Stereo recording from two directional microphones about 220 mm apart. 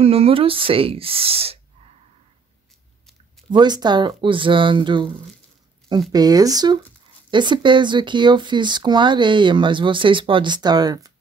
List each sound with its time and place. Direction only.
0.0 s speech: 25° right (ahead or behind)
3.4 s speech: 20° right (ahead or behind)
6.1 s speech: 15° right (ahead or behind)